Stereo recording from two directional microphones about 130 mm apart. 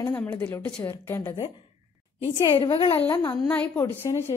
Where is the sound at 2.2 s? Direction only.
40° left (ahead or behind).